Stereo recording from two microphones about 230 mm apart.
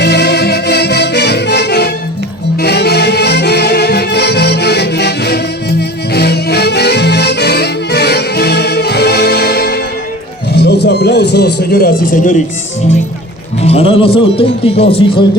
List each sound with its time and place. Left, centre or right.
0.0 s music: left
13.6 s speech: left